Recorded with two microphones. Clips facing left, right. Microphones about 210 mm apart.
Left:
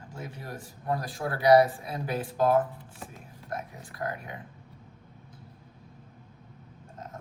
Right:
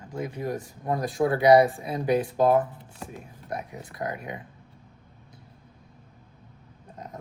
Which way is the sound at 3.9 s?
20° right (ahead or behind).